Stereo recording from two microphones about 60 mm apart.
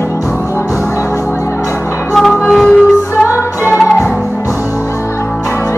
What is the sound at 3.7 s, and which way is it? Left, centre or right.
Music, centre.